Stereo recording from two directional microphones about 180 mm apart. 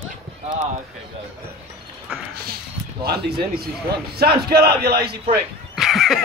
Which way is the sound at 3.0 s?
60° right (ahead or behind).